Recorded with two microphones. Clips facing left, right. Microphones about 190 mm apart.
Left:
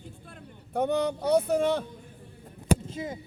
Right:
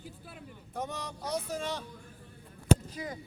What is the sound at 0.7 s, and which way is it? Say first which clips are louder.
Speech: left 13 dB; 60° left (ahead or behind).